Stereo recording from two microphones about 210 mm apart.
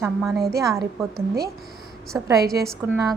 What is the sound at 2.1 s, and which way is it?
Speech, 15° right (ahead or behind).